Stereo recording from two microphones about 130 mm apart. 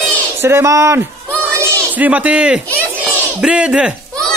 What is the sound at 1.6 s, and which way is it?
A man's voice, 10° right (ahead or behind).